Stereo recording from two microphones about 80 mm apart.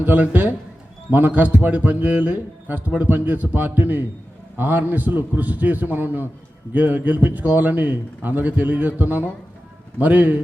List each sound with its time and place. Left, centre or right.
0.0 s a man's voice: right